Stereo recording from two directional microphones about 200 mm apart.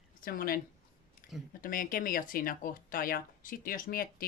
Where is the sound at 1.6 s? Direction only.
45° left (ahead or behind).